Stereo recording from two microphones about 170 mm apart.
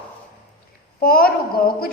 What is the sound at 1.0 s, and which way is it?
Speech, 60° left (ahead or behind).